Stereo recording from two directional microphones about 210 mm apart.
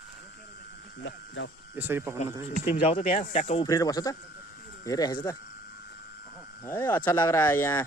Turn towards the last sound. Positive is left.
turn(degrees=10)  # may be behind; listen again after turning